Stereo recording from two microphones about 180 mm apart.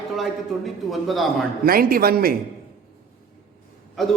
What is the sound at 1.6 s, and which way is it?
Speech, 55° right (ahead or behind).